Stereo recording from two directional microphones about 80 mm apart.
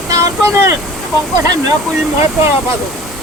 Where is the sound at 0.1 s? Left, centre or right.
Right.